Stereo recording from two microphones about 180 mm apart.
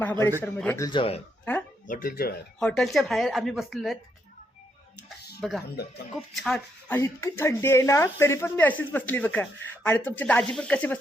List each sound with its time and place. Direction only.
0.0 s speech: 10° left (ahead or behind)
0.9 s speech: 30° left (ahead or behind)
1.9 s speech: 50° left (ahead or behind)
2.6 s speech: 5° left (ahead or behind)
5.4 s speech: centre (ahead or behind)